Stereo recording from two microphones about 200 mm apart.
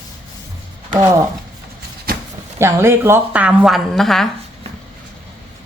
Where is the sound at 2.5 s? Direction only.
15° right (ahead or behind).